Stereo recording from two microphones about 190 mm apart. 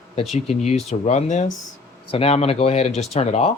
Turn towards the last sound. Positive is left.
turn(degrees=35)  # may be behind; listen again after turning